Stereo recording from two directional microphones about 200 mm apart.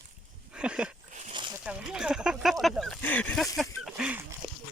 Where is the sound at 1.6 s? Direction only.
5° right (ahead or behind).